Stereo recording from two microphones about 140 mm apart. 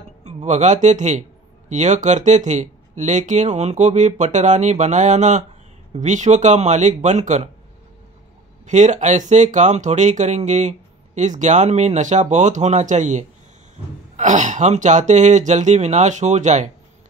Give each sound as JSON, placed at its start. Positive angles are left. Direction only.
{"t": 0.2, "sound": "speech", "side_deg": -55}
{"t": 8.6, "sound": "speech", "side_deg": -60}